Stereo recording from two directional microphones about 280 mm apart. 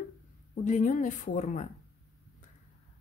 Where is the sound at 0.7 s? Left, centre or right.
Left.